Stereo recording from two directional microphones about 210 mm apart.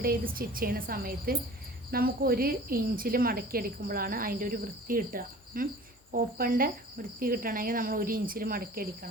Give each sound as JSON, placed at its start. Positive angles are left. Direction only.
{"t": 0.0, "sound": "speech", "side_deg": -45}